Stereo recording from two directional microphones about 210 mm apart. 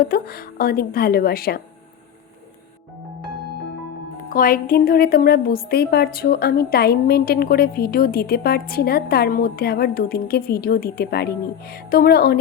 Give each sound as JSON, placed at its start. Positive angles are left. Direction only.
{"t": 0.0, "sound": "speech", "side_deg": 45}
{"t": 4.3, "sound": "speech", "side_deg": 40}